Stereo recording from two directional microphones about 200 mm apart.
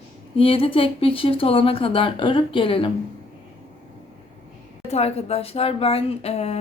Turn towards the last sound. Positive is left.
turn(degrees=30)  # may be behind; listen again after turning